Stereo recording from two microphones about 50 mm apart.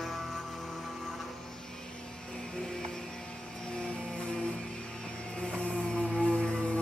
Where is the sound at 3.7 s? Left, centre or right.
Centre.